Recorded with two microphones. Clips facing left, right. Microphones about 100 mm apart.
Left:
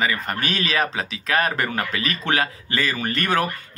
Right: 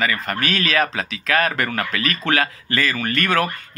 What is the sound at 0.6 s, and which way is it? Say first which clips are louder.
Speech: right 2 dB; 30° left (ahead or behind).